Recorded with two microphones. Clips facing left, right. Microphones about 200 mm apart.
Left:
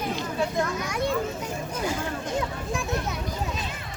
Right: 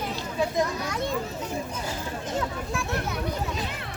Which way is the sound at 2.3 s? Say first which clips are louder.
Right 1 dB; 15° left (ahead or behind).